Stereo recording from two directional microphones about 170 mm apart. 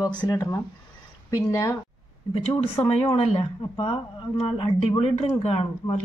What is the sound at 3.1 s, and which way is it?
Speech, 30° left (ahead or behind).